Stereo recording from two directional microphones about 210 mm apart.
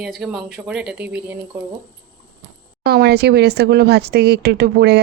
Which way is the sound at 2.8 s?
50° right (ahead or behind).